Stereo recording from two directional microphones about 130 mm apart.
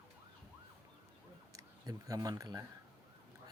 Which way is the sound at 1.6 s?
30° right (ahead or behind).